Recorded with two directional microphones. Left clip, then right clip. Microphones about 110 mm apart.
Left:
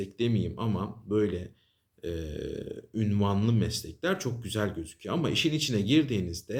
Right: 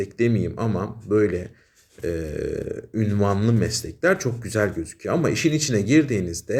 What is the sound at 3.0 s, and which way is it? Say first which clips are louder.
Speech: right 7 dB; 20° left (ahead or behind).